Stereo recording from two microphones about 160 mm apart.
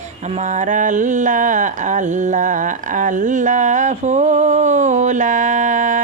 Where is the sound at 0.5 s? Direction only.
50° right (ahead or behind).